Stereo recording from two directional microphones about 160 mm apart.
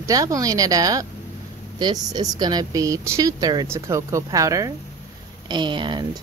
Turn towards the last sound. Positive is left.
turn(degrees=-30)  # may be behind; listen again after turning